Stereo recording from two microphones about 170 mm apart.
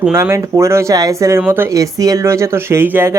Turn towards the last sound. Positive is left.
turn(degrees=-15)  # may be behind; listen again after turning